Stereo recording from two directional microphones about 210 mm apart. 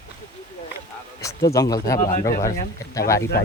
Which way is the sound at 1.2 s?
15° left (ahead or behind).